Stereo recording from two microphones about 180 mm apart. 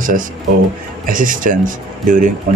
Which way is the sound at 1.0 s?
50° right (ahead or behind).